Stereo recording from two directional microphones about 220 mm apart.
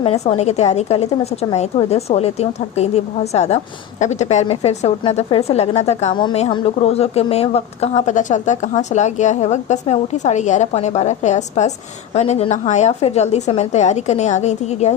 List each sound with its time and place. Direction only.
0.0 s a woman's voice: 25° left (ahead or behind)